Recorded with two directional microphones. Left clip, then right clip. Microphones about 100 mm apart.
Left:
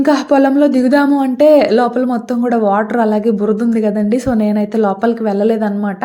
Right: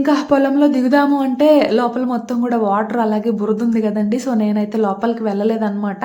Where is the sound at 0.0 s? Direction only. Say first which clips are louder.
Left 3 dB; 40° left (ahead or behind).